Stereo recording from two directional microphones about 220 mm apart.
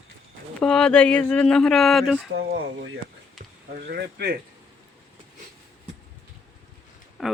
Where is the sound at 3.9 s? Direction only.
45° right (ahead or behind).